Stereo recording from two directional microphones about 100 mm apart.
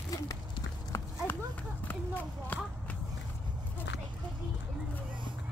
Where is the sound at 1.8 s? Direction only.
20° left (ahead or behind).